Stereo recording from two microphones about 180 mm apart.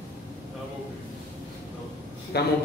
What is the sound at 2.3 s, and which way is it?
Speech, 65° left (ahead or behind).